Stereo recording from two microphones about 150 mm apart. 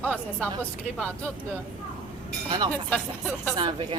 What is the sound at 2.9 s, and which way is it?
Speech, 10° left (ahead or behind).